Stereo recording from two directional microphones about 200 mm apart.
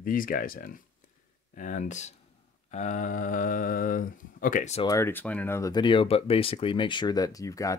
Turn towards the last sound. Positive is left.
turn(degrees=15)  # may be behind; listen again after turning